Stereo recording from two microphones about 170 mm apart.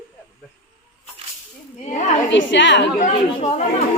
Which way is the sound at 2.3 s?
90° left.